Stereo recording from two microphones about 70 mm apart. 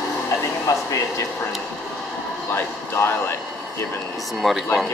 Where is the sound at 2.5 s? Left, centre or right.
Left.